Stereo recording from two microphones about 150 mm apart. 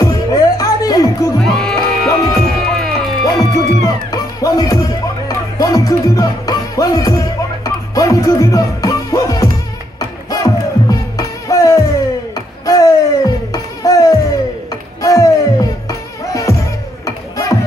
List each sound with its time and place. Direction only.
0.0 s music: 25° left (ahead or behind)
1.4 s music: centre (ahead or behind)
3.5 s music: 25° left (ahead or behind)